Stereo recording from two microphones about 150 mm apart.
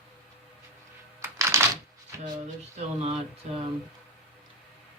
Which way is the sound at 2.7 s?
45° right (ahead or behind).